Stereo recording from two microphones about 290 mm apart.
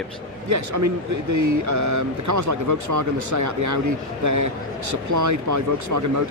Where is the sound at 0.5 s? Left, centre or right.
Right.